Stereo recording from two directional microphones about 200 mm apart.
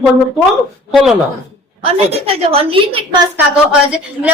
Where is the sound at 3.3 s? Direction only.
5° right (ahead or behind).